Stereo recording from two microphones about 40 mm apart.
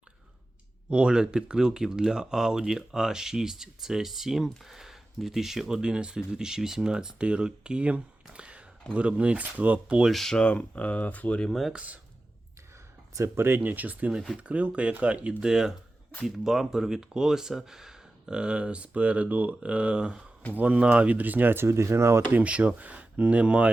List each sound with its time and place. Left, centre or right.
0.9 s speech: right
5.9 s speech: right
10.1 s speech: centre
10.3 s speech: left
11.7 s speech: right
13.3 s speech: right
15.4 s speech: centre
18.3 s speech: right
20.5 s speech: right
21.9 s speech: right
22.4 s speech: right